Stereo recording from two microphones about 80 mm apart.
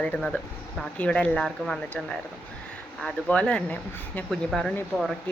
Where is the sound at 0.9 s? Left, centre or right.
Centre.